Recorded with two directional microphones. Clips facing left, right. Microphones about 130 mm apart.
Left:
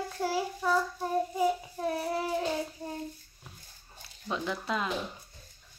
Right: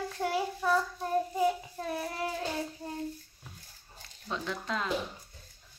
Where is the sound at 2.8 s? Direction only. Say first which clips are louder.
Left 1 dB; 25° left (ahead or behind).